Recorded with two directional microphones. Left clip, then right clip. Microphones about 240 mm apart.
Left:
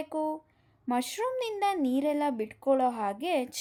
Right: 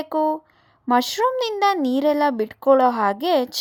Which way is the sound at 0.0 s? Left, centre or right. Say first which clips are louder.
Right 11 dB; centre.